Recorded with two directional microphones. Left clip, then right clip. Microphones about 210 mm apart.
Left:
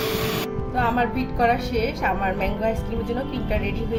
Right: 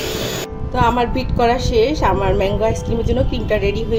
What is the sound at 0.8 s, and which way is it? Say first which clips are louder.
A woman's voice: right 6 dB; 30° right (ahead or behind).